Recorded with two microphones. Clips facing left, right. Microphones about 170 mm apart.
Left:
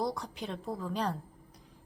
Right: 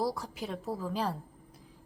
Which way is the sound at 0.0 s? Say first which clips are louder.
Right 1 dB; 5° right (ahead or behind).